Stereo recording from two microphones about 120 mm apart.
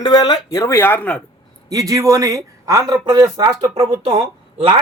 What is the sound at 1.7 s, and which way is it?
Speech, 30° right (ahead or behind).